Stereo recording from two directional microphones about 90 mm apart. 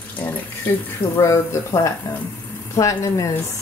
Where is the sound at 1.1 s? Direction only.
35° left (ahead or behind).